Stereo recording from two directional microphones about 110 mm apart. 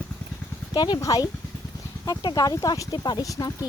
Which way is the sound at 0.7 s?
40° left (ahead or behind).